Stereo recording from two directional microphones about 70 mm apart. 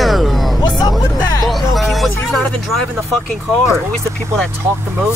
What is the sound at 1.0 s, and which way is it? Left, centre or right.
Music, left.